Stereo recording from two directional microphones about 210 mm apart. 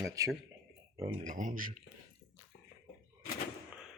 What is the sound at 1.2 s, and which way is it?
Speech, 35° right (ahead or behind).